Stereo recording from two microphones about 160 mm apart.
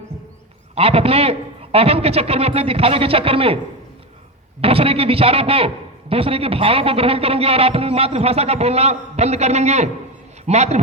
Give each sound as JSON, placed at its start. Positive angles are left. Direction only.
{"t": 0.8, "sound": "a man's voice", "side_deg": -40}
{"t": 4.6, "sound": "a man's voice", "side_deg": -35}